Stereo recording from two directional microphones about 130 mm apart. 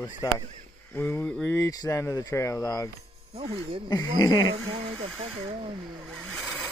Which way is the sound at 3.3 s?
50° right (ahead or behind).